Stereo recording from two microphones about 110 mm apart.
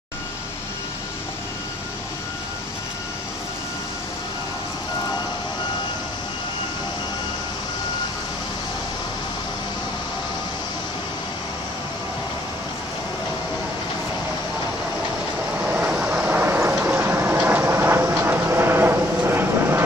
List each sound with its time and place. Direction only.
15.6 s vehicle: 10° right (ahead or behind)
16.7 s train: 15° right (ahead or behind)